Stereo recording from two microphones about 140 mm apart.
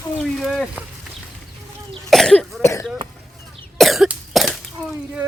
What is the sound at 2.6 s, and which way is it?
Throat clearing, 20° left (ahead or behind).